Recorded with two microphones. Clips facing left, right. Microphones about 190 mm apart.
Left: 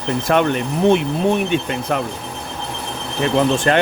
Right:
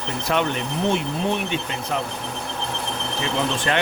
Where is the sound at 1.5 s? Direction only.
55° left (ahead or behind).